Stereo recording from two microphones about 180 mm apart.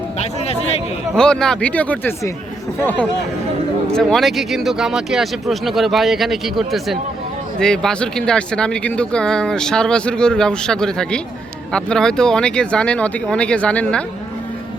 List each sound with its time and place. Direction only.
0.2 s speech: 35° left (ahead or behind)
1.1 s speech: 5° left (ahead or behind)
3.9 s speech: centre (ahead or behind)